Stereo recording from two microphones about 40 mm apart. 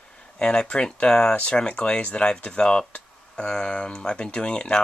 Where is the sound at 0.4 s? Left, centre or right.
Left.